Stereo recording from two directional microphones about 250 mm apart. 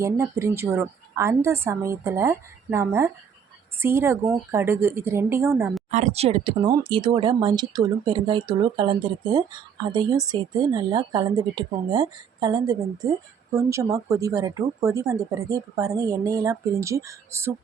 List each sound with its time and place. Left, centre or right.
0.0 s speech: centre
5.9 s speech: right; by 17.5 s centre